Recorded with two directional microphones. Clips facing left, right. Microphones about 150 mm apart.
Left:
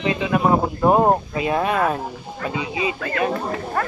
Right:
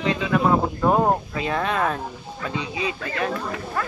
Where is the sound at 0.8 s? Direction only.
20° left (ahead or behind).